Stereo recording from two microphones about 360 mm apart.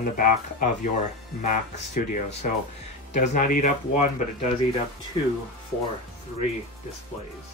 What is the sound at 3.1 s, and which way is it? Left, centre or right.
Speech, left.